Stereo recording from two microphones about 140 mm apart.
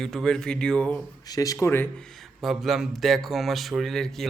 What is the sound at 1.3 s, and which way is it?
Speech, 25° left (ahead or behind).